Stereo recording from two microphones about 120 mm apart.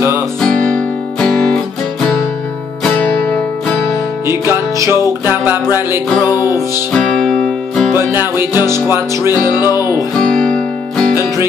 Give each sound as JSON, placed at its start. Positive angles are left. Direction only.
{"t": 0.4, "sound": "guitar", "side_deg": 10}
{"t": 2.8, "sound": "music", "side_deg": 10}
{"t": 4.3, "sound": "music", "side_deg": -20}
{"t": 4.9, "sound": "music", "side_deg": 30}
{"t": 5.3, "sound": "music", "side_deg": -15}
{"t": 6.9, "sound": "music", "side_deg": 5}
{"t": 7.9, "sound": "music", "side_deg": -20}
{"t": 9.6, "sound": "music", "side_deg": 30}
{"t": 10.1, "sound": "music", "side_deg": 5}